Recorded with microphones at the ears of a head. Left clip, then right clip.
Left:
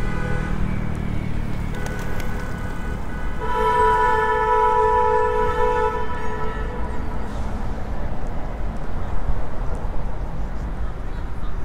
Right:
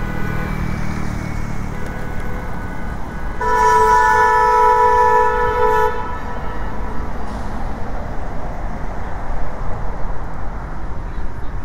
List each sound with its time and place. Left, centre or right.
3.3 s vehicle: right